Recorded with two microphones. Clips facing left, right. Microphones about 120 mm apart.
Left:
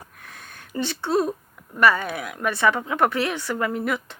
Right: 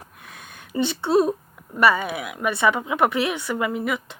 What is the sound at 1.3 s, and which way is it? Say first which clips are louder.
A woman's voice: right 4 dB; 15° right (ahead or behind).